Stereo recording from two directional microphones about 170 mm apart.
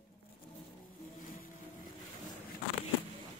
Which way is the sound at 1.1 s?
55° left (ahead or behind).